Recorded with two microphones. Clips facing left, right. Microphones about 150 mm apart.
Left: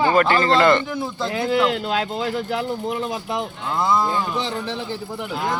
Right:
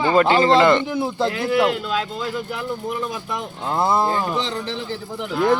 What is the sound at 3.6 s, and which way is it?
Speech, 30° right (ahead or behind).